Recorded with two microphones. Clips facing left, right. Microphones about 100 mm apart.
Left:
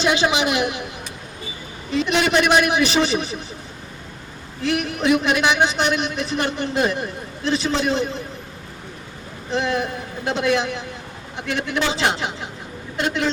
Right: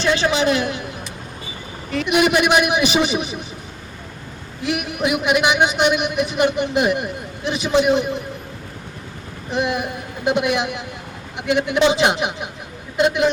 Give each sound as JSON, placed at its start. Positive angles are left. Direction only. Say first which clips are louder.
{"t": 0.0, "sound": "a man's voice", "louder": "right 1 dB", "side_deg": 15}
{"t": 2.0, "sound": "a man's voice", "louder": "right 2 dB", "side_deg": -15}
{"t": 4.6, "sound": "a man's voice", "louder": "left 1 dB", "side_deg": -15}
{"t": 9.5, "sound": "a man's voice", "louder": "even", "side_deg": -15}